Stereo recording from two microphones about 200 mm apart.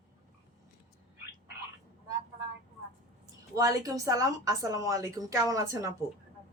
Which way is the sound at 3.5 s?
15° right (ahead or behind).